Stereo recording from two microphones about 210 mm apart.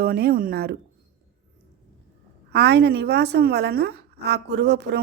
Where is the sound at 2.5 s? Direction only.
55° right (ahead or behind).